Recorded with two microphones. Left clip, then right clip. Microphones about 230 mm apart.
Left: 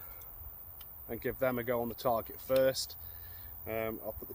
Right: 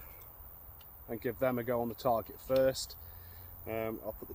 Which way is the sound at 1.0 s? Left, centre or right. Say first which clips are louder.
Even; centre.